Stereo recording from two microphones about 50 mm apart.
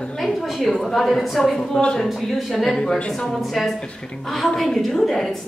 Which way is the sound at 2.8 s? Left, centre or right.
Centre.